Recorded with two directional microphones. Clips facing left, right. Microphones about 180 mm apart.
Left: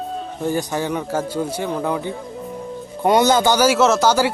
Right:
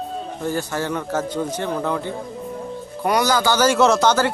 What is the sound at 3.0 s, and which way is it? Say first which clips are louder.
Speech: left 4 dB; 25° left (ahead or behind).